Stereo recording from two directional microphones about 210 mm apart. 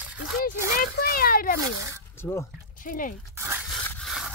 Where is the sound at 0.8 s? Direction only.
45° left (ahead or behind).